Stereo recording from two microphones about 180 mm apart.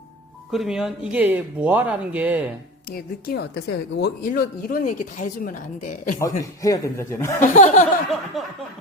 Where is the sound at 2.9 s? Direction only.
55° left (ahead or behind).